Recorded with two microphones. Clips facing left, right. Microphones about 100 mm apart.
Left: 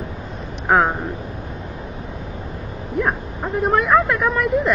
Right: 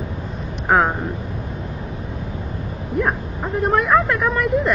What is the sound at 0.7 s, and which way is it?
Speech, centre (ahead or behind).